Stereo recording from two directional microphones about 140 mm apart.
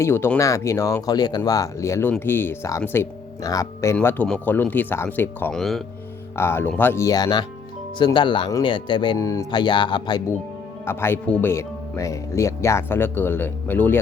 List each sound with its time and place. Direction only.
0.0 s speech: 15° left (ahead or behind)
3.9 s speech: 10° left (ahead or behind)
5.5 s speech: centre (ahead or behind)
6.3 s speech: 15° left (ahead or behind); by 10.2 s 30° left (ahead or behind)
10.8 s speech: 15° left (ahead or behind)